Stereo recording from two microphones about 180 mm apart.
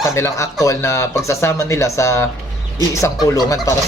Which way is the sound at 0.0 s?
15° left (ahead or behind).